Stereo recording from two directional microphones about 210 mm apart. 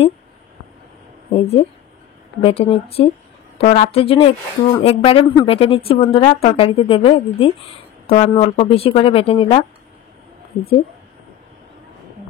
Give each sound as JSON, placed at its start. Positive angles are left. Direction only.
{"t": 1.3, "sound": "speech", "side_deg": 30}